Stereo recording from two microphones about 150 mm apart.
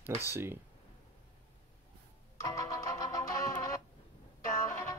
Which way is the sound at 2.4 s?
20° left (ahead or behind).